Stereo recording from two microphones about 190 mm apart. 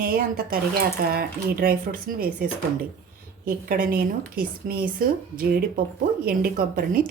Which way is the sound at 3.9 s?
50° right (ahead or behind).